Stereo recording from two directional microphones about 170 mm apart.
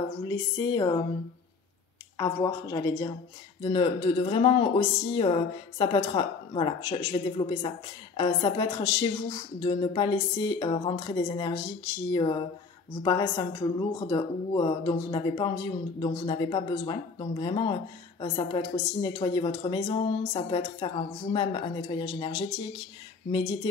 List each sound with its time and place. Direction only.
0.3 s a woman's voice: 20° left (ahead or behind)
2.1 s a woman's voice: 25° left (ahead or behind)